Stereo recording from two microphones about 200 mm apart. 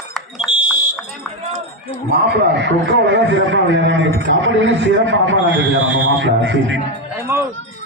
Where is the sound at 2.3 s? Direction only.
60° right (ahead or behind).